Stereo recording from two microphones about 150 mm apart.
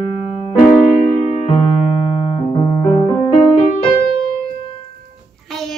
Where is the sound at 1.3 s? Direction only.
40° left (ahead or behind).